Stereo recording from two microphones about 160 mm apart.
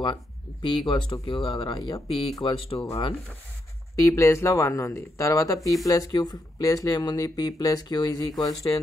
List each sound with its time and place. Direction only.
0.0 s speech: 30° left (ahead or behind)
4.0 s speech: 20° left (ahead or behind)